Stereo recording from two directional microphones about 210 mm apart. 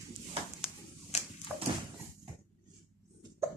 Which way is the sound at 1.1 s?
30° left (ahead or behind).